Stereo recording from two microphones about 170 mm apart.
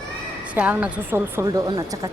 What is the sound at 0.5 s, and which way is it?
A woman's voice, 10° right (ahead or behind).